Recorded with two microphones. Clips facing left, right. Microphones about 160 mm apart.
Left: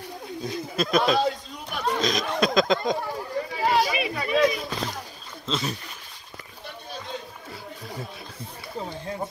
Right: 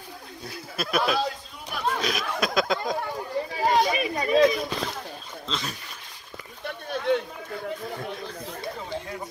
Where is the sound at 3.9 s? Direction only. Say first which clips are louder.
Right 2 dB; 40° right (ahead or behind).